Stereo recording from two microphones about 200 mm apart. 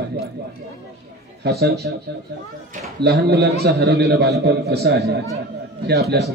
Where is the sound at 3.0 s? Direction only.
55° right (ahead or behind).